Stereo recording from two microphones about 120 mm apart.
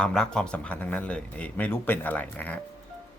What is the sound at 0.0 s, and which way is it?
Speech, 5° left (ahead or behind).